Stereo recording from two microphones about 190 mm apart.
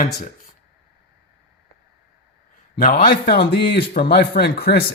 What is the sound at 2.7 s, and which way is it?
A man's voice, 50° left (ahead or behind).